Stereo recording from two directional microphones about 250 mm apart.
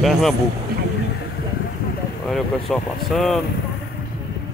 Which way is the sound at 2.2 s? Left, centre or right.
Centre.